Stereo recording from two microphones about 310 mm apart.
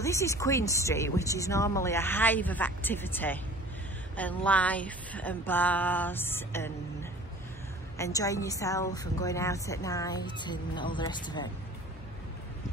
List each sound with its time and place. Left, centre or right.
0.0 s a woman's voice: centre